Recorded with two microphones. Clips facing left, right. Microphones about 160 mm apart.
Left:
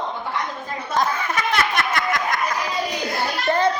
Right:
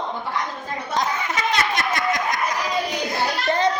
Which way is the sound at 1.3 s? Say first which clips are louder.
Left 1 dB; 55° left (ahead or behind).